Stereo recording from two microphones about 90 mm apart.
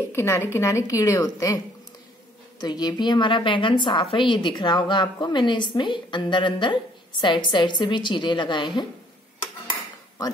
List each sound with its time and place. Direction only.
0.1 s a woman's voice: 30° left (ahead or behind)
2.6 s a woman's voice: 50° left (ahead or behind)